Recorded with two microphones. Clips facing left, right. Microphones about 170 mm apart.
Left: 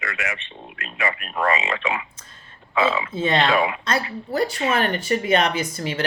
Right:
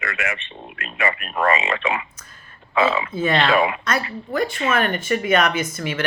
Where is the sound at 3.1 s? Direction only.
25° left (ahead or behind).